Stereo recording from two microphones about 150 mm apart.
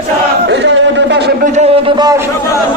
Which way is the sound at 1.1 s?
90° right.